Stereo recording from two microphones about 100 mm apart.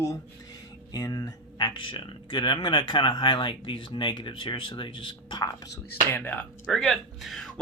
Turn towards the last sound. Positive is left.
turn(degrees=5)  # may be behind; listen again after turning